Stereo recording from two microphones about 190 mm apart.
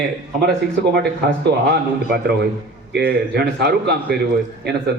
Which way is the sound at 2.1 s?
60° right (ahead or behind).